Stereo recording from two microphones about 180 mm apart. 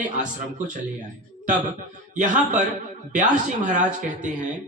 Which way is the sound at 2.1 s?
45° right (ahead or behind).